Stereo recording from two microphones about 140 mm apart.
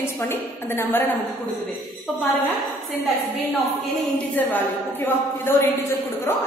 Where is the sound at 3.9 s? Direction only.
10° left (ahead or behind).